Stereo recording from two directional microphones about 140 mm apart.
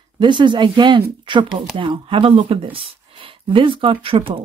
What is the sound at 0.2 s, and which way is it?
Speech, 35° right (ahead or behind).